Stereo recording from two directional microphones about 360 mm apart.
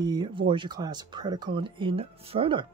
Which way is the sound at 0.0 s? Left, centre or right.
Centre.